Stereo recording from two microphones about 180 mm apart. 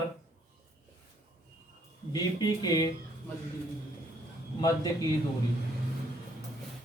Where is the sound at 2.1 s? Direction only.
20° left (ahead or behind).